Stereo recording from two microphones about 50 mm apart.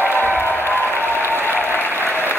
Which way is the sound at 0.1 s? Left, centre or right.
Left.